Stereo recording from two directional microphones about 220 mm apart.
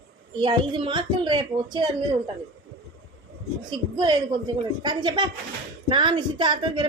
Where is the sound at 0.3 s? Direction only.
20° right (ahead or behind).